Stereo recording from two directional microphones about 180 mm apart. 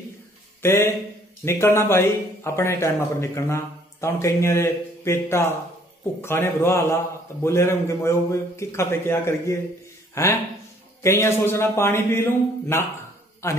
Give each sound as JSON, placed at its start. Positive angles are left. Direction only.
{"t": 0.6, "sound": "speech", "side_deg": 15}